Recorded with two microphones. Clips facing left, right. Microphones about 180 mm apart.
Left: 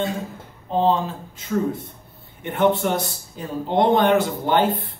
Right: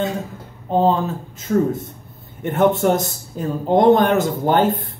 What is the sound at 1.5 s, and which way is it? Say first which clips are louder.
A man's voice: right 5 dB; 45° right (ahead or behind).